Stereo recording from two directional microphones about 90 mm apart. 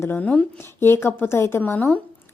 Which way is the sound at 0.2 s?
15° left (ahead or behind).